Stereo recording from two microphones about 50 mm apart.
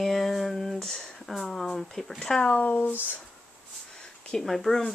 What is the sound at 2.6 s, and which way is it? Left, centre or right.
Speech, left.